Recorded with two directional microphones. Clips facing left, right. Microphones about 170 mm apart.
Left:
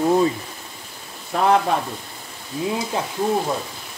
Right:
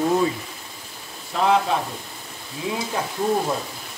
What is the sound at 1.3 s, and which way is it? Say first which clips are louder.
Speech: left 2 dB; 55° left (ahead or behind).